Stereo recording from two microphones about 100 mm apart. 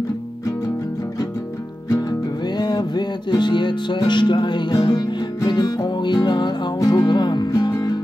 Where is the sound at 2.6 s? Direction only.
45° left (ahead or behind).